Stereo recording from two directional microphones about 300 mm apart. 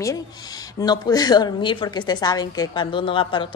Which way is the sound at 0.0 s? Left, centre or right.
Centre.